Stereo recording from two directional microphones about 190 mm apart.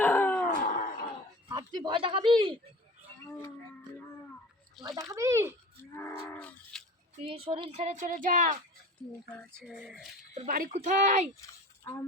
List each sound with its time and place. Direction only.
0.0 s howl: 10° left (ahead or behind)
0.4 s a sound: 45° left (ahead or behind)
1.5 s speech: 25° right (ahead or behind)
4.9 s speech: 15° right (ahead or behind)
5.9 s cattle: 15° left (ahead or behind)
6.7 s a sound: centre (ahead or behind)
7.2 s speech: 30° right (ahead or behind)
9.6 s speech: 5° right (ahead or behind)
10.3 s speech: 45° right (ahead or behind)